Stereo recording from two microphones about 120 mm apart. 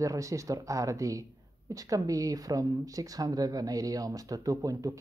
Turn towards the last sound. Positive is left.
turn(degrees=-30)  # may be behind; listen again after turning